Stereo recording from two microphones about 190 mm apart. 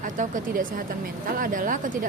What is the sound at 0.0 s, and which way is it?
Speech, 45° right (ahead or behind).